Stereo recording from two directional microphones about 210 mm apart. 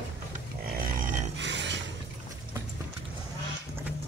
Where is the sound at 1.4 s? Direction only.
55° right (ahead or behind).